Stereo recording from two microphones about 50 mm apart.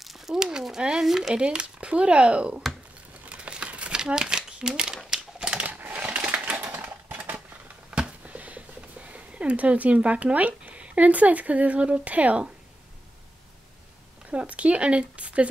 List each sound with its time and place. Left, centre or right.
0.0 s a sound: centre
1.0 s speech: centre
3.3 s a sound: right
4.0 s typewriter: centre
5.6 s typing: right
6.6 s typewriter: right
7.9 s a sound: right
9.1 s speech: right
14.3 s speech: right